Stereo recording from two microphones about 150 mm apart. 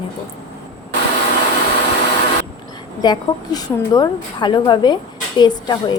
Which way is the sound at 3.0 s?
25° left (ahead or behind).